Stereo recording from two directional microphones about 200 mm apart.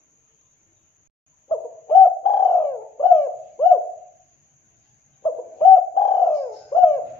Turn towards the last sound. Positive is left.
turn(degrees=15)  # may be behind; listen again after turning